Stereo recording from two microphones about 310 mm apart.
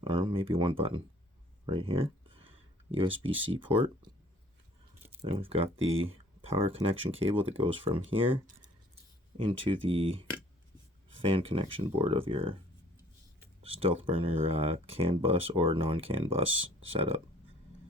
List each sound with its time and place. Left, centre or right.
0.0 s speech: centre
5.0 s speech: centre
13.6 s speech: centre